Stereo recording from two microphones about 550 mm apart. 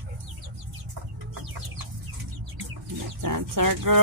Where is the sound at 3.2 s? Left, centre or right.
Right.